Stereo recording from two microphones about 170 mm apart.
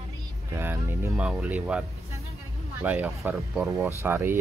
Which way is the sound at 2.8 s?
10° right (ahead or behind).